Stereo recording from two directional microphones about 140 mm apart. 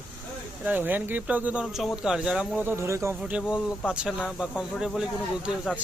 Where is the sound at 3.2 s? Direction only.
10° right (ahead or behind).